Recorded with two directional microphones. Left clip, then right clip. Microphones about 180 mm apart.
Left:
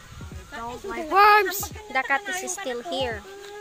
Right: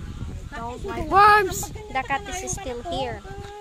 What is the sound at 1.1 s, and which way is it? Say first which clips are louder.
Speech: right 1 dB; 75° right (ahead or behind).